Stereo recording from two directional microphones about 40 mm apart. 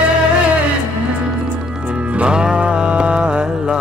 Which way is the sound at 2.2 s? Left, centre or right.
Right.